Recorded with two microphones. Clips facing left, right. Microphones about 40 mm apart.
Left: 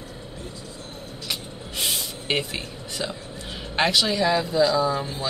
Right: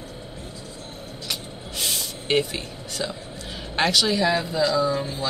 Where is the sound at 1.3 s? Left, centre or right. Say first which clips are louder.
Left 1 dB; centre.